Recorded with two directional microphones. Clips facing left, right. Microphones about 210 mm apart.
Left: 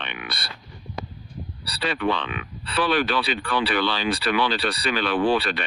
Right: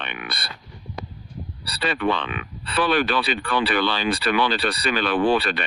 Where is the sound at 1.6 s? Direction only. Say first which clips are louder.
Right 1 dB; 50° right (ahead or behind).